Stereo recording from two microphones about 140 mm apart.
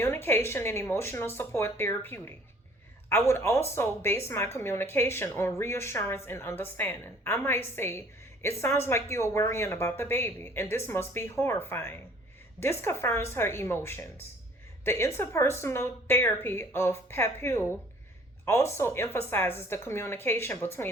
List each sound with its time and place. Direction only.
0.0 s a woman's voice: 15° left (ahead or behind)